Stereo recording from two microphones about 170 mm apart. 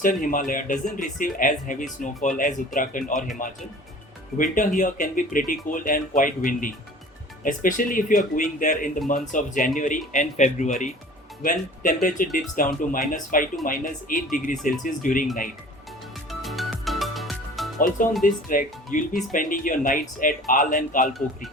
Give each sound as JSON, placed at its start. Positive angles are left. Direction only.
{"t": 0.0, "sound": "speech", "side_deg": 50}
{"t": 4.5, "sound": "speech", "side_deg": 50}
{"t": 16.3, "sound": "music", "side_deg": 0}
{"t": 17.7, "sound": "speech", "side_deg": 55}